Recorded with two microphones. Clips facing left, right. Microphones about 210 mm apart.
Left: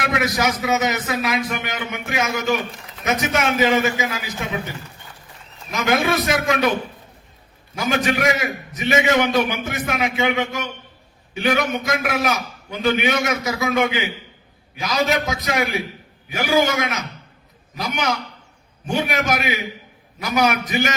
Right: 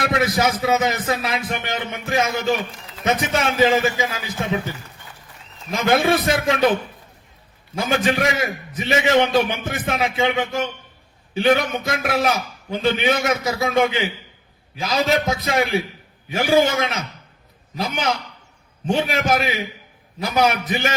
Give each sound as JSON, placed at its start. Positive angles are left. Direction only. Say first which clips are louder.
{"t": 0.0, "sound": "speech", "louder": "right 2 dB", "side_deg": -30}
{"t": 5.7, "sound": "speech", "louder": "right 2 dB", "side_deg": -30}
{"t": 7.8, "sound": "a man's voice", "louder": "right 1 dB", "side_deg": -30}